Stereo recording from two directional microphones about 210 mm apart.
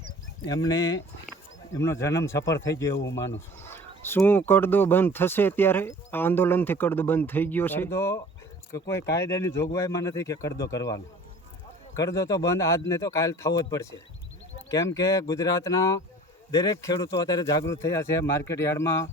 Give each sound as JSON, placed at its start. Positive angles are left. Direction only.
{"t": 0.4, "sound": "speech", "side_deg": 15}